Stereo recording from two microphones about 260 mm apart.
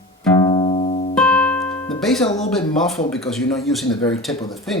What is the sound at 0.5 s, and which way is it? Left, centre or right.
Music, left.